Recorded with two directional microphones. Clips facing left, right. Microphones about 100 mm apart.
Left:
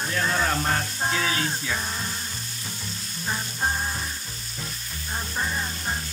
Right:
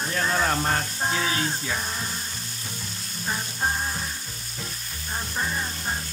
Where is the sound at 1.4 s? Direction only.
5° right (ahead or behind).